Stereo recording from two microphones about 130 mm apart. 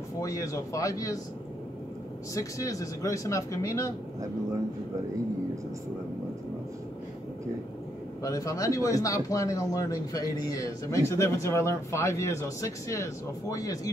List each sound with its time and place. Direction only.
0.2 s a man's voice: 25° left (ahead or behind)
2.3 s a man's voice: 25° left (ahead or behind)
8.2 s a man's voice: 25° left (ahead or behind)